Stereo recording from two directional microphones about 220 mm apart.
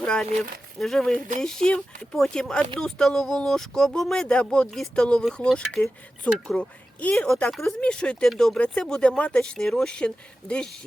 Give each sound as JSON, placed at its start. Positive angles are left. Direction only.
{"t": 0.0, "sound": "speech", "side_deg": 5}